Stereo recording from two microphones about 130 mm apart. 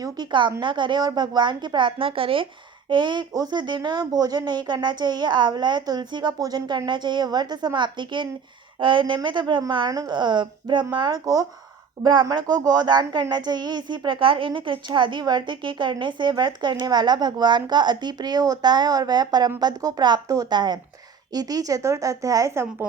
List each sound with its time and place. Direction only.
0.0 s speech: 35° right (ahead or behind)